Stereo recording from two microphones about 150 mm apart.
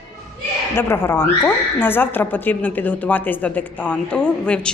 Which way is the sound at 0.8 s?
15° left (ahead or behind).